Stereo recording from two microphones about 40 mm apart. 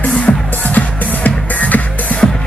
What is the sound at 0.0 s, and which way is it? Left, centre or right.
Music, left.